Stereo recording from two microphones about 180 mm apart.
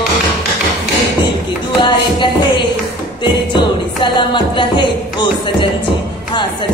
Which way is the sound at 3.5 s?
25° left (ahead or behind).